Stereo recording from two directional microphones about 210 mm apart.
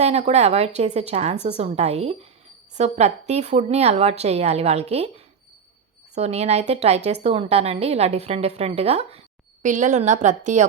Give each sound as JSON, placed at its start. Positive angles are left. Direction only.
{"t": 0.0, "sound": "a woman's voice", "side_deg": -30}
{"t": 6.1, "sound": "a woman's voice", "side_deg": -30}